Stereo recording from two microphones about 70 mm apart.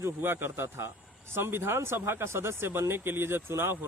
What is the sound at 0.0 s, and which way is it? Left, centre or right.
Speech, right.